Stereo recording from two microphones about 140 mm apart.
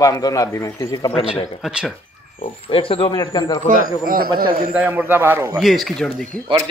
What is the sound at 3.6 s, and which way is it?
Speech, 80° right.